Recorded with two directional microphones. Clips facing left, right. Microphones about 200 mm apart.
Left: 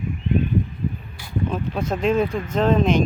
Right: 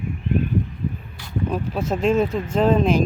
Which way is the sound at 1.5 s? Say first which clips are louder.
Right 3 dB; 5° right (ahead or behind).